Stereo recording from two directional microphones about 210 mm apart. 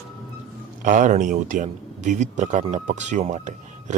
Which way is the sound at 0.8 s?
35° right (ahead or behind).